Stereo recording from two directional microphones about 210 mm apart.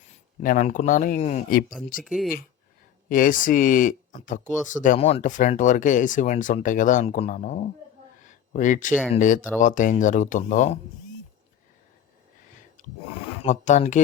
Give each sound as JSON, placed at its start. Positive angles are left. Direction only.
{"t": 0.4, "sound": "speech", "side_deg": 40}
{"t": 2.0, "sound": "speech", "side_deg": 0}
{"t": 3.1, "sound": "speech", "side_deg": 40}
{"t": 4.4, "sound": "speech", "side_deg": 0}
{"t": 4.7, "sound": "speech", "side_deg": 35}
{"t": 8.2, "sound": "a sound", "side_deg": 35}
{"t": 9.1, "sound": "speech", "side_deg": 40}
{"t": 13.4, "sound": "speech", "side_deg": 35}